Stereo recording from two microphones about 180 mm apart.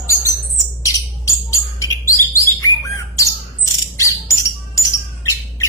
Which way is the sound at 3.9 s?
15° left (ahead or behind).